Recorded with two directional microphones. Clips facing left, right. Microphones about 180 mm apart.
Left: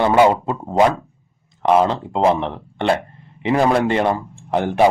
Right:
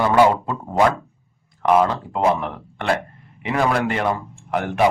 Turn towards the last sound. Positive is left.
turn(degrees=30)  # may be behind; listen again after turning